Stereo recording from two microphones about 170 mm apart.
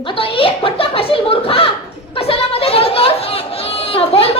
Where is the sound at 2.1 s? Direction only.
35° left (ahead or behind).